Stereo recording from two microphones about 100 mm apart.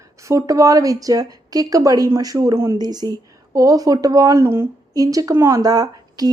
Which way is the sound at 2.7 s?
45° right (ahead or behind).